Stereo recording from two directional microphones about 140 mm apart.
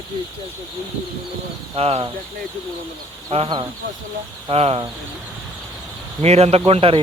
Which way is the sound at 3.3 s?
45° right (ahead or behind).